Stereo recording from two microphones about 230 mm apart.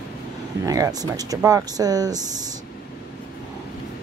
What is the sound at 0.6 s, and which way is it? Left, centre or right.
Speech, centre.